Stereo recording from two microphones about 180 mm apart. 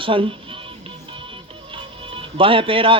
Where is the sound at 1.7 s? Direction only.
30° right (ahead or behind).